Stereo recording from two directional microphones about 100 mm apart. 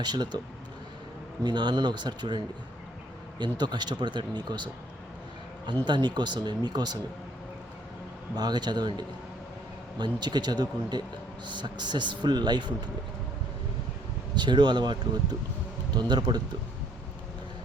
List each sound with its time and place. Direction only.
0.0 s a man's voice: 45° right (ahead or behind)
1.5 s a man's voice: 45° right (ahead or behind)
5.8 s a man's voice: 45° right (ahead or behind)
8.4 s a man's voice: 45° right (ahead or behind)
14.3 s a man's voice: 50° right (ahead or behind)